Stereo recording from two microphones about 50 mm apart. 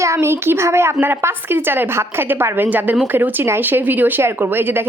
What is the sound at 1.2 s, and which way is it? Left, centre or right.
A woman's voice, right.